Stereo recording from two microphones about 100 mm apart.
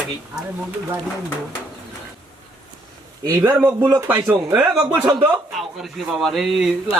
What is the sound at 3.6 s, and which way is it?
Speech, 20° right (ahead or behind).